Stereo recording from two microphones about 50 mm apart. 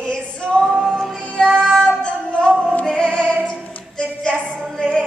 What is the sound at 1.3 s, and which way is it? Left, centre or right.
Music, centre.